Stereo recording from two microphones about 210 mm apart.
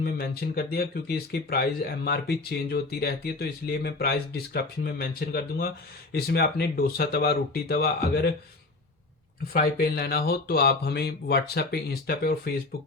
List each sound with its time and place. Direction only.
0.0 s speech: 45° left (ahead or behind)
9.5 s speech: 45° left (ahead or behind)